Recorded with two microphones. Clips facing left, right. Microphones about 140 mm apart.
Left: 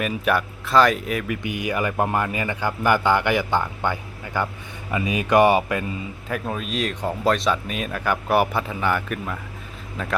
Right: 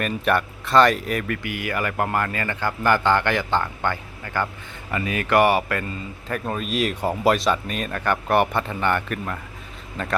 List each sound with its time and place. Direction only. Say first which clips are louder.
0.0 s speech: even; 5° left (ahead or behind)
1.4 s a man's voice: left 2 dB; 20° left (ahead or behind)
6.2 s speech: right 1 dB; centre (ahead or behind)